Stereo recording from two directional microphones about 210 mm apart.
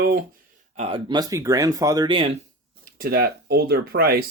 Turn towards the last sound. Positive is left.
turn(degrees=-45)  # may be behind; listen again after turning